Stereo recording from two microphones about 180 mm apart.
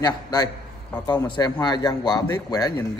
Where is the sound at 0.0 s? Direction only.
20° left (ahead or behind).